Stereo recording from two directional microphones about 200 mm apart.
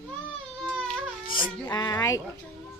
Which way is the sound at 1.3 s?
20° left (ahead or behind).